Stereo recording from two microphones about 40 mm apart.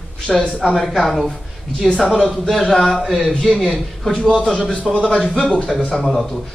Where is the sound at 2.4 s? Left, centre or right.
Centre.